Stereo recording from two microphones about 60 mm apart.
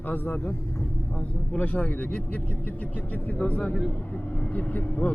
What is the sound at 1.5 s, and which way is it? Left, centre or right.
Speech, left.